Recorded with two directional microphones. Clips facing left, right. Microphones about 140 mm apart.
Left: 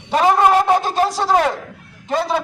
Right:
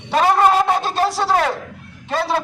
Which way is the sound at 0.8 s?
15° left (ahead or behind).